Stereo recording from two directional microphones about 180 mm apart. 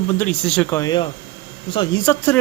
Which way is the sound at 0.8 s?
25° left (ahead or behind).